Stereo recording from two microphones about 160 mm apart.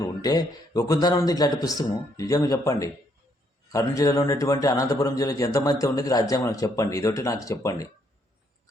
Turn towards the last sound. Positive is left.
turn(degrees=20)  # may be behind; listen again after turning